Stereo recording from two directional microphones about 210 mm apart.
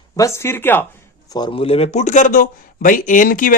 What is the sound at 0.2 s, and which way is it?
Speech, 15° left (ahead or behind).